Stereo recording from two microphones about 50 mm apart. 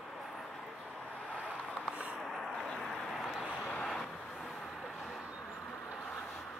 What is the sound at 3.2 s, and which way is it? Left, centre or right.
Vehicle, centre.